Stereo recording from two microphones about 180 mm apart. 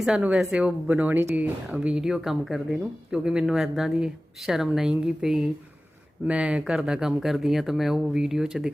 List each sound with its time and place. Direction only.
0.0 s speech: 5° right (ahead or behind)